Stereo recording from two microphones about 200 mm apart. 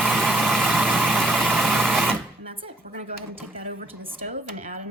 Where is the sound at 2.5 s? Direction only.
30° right (ahead or behind).